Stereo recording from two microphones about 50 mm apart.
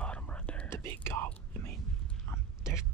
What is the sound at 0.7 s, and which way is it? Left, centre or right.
Whispering, left.